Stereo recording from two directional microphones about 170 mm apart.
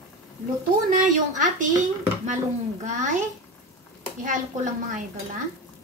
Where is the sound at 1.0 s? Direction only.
50° right (ahead or behind).